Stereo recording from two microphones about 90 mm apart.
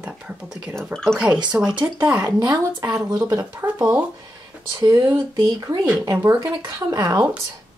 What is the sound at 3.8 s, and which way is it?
Speech, 15° right (ahead or behind).